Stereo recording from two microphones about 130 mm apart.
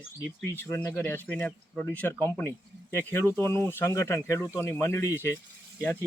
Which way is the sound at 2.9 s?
20° left (ahead or behind).